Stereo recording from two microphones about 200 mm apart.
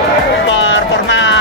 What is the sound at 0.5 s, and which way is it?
Music, 65° left (ahead or behind).